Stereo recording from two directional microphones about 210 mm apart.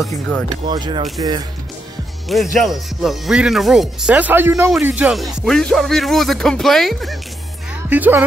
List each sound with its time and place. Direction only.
0.0 s speech: 5° left (ahead or behind)
0.5 s speech: 20° right (ahead or behind)
2.2 s speech: centre (ahead or behind)